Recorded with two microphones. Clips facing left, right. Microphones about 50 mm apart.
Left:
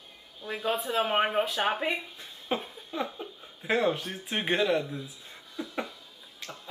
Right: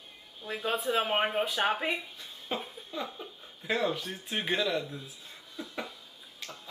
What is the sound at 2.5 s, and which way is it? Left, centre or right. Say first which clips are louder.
Speech: left 4 dB; left.